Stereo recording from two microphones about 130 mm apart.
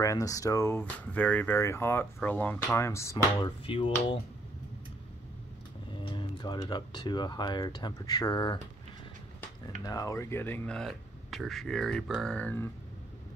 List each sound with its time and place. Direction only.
0.0 s speech: 25° left (ahead or behind)
3.6 s speech: 45° left (ahead or behind)
6.0 s speech: 35° left (ahead or behind)
9.8 s speech: 25° left (ahead or behind)
10.8 s speech: centre (ahead or behind)